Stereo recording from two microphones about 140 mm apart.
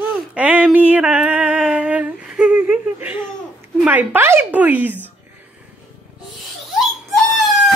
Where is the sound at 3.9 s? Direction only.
15° right (ahead or behind).